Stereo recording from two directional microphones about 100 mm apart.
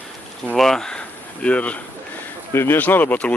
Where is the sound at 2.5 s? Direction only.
25° left (ahead or behind).